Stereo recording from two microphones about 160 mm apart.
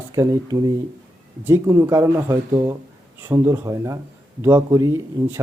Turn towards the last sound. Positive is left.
turn(degrees=-20)  # may be behind; listen again after turning